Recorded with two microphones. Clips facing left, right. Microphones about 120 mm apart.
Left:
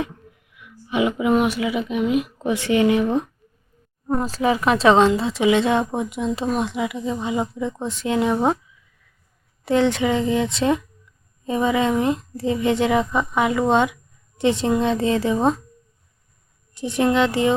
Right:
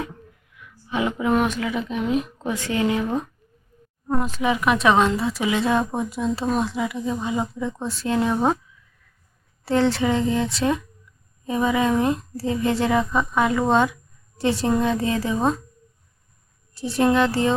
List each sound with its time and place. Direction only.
0.9 s a woman's voice: 15° left (ahead or behind)
4.1 s speech: 30° left (ahead or behind); by 8.5 s 15° left (ahead or behind)
9.6 s a woman's voice: 15° left (ahead or behind)
16.7 s a woman's voice: 20° left (ahead or behind)